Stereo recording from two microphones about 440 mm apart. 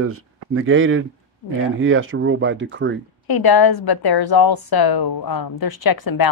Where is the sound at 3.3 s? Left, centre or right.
Left.